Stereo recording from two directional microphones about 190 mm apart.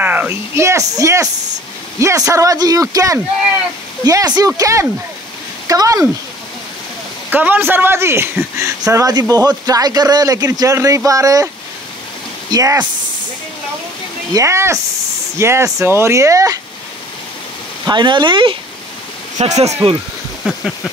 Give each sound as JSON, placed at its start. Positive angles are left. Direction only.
{"t": 0.0, "sound": "a man's voice", "side_deg": -10}
{"t": 7.2, "sound": "a man's voice", "side_deg": -10}
{"t": 14.3, "sound": "a man's voice", "side_deg": -15}
{"t": 17.8, "sound": "a man's voice", "side_deg": -25}
{"t": 20.4, "sound": "a sound", "side_deg": 5}